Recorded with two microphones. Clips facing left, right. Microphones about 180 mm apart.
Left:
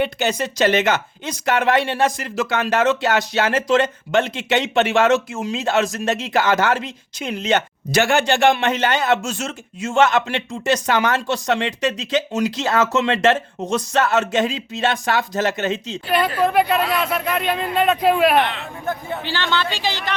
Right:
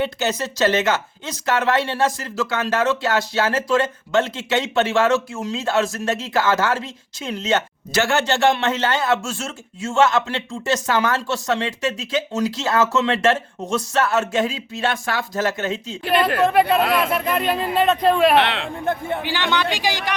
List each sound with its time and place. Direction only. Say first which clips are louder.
0.0 s speech: left 2 dB; 15° left (ahead or behind)
16.5 s speech: right 1 dB; centre (ahead or behind)
18.3 s speech: right 1 dB; 75° right (ahead or behind)
19.2 s a man's voice: left 2 dB; 15° right (ahead or behind)